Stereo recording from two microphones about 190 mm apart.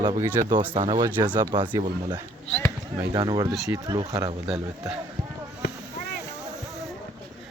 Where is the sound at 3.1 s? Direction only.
25° right (ahead or behind).